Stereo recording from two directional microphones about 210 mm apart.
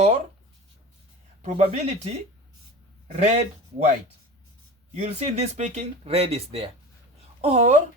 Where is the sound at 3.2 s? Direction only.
30° right (ahead or behind).